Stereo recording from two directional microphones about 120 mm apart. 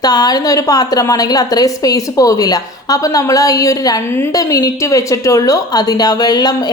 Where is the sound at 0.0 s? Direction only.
30° left (ahead or behind).